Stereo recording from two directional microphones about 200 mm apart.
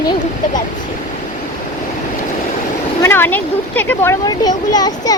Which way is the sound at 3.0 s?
10° left (ahead or behind).